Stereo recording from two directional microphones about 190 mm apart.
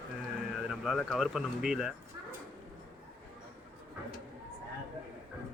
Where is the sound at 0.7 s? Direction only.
Centre (ahead or behind).